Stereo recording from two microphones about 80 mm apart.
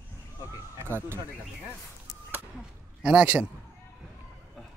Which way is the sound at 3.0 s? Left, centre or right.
Centre.